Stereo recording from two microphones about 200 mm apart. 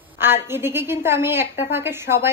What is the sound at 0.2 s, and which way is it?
A woman's voice, 10° right (ahead or behind).